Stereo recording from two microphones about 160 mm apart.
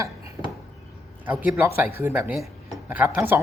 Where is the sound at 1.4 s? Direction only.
15° right (ahead or behind).